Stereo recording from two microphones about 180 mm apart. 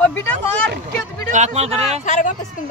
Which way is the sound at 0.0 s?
10° left (ahead or behind).